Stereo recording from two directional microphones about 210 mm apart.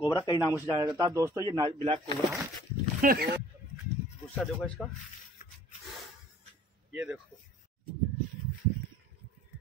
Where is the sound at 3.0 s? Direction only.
45° right (ahead or behind).